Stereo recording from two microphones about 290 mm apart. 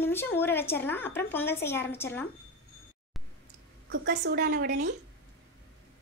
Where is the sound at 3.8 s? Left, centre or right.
Right.